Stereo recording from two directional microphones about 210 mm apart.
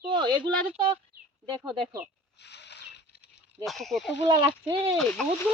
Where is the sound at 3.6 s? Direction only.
Centre (ahead or behind).